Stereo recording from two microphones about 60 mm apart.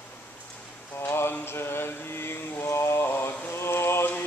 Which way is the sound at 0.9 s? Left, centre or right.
Left.